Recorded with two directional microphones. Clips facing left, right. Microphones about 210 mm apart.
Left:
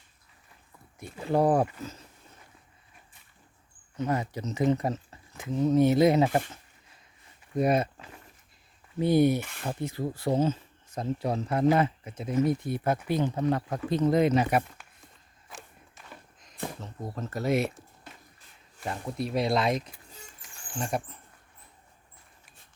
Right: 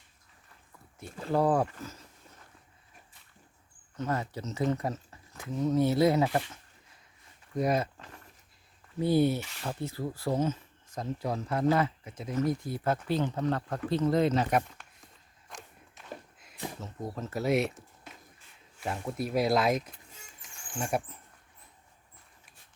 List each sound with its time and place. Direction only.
1.3 s speech: 20° left (ahead or behind)
3.9 s speech: 15° left (ahead or behind)
7.5 s speech: 25° left (ahead or behind)
9.0 s speech: 20° left (ahead or behind)
9.4 s speech: 55° left (ahead or behind)
9.6 s speech: 20° left (ahead or behind)
15.4 s walk: 5° left (ahead or behind)
16.8 s speech: 5° right (ahead or behind)